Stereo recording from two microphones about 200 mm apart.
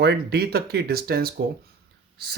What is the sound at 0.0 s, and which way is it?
Speech, 55° right (ahead or behind).